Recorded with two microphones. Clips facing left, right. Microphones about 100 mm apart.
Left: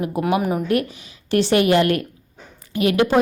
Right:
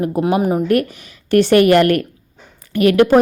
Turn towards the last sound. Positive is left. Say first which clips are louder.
# right 6 dB
turn(degrees=-55)  # may be behind; listen again after turning